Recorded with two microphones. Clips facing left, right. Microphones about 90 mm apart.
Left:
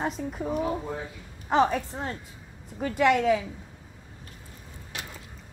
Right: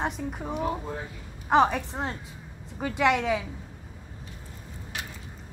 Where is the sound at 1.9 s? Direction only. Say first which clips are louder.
Right 2 dB; 40° right (ahead or behind).